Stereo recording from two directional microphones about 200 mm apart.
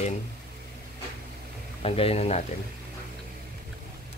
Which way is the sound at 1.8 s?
30° left (ahead or behind).